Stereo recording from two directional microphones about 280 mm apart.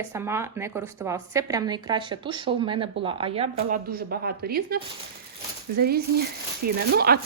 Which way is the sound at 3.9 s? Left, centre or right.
Right.